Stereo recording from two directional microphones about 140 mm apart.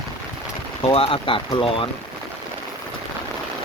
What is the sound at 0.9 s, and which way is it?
Speech, 40° left (ahead or behind).